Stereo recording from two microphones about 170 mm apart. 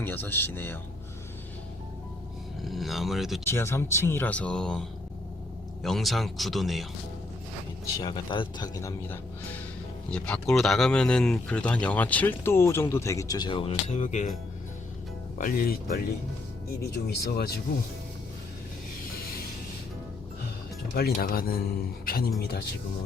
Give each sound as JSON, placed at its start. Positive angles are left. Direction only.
{"t": 0.0, "sound": "speech", "side_deg": 10}
{"t": 2.6, "sound": "speech", "side_deg": 0}
{"t": 3.4, "sound": "speech", "side_deg": 15}
{"t": 5.8, "sound": "speech", "side_deg": 0}
{"t": 7.9, "sound": "a man's voice", "side_deg": 25}
{"t": 10.1, "sound": "speech", "side_deg": 5}
{"t": 15.4, "sound": "speech", "side_deg": 55}
{"t": 16.8, "sound": "speech", "side_deg": 70}
{"t": 20.9, "sound": "speech", "side_deg": 60}